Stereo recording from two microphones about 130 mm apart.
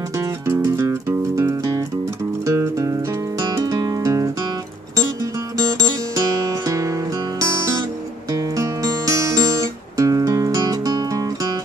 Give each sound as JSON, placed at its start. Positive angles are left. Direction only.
{"t": 0.5, "sound": "music", "side_deg": -25}
{"t": 5.8, "sound": "music", "side_deg": -25}
{"t": 8.3, "sound": "music", "side_deg": -25}